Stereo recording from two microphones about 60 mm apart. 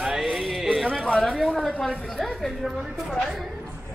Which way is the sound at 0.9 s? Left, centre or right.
Centre.